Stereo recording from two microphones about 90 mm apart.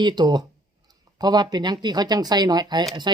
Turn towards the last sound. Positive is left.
turn(degrees=-55)  # may be behind; listen again after turning